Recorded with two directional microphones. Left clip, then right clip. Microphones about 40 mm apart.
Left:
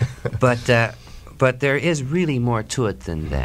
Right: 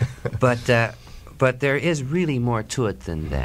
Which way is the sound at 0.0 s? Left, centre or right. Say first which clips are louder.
Left 2 dB; left.